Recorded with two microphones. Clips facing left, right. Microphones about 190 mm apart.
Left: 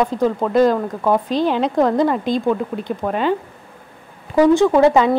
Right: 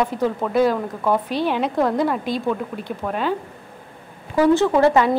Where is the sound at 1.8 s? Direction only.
5° right (ahead or behind).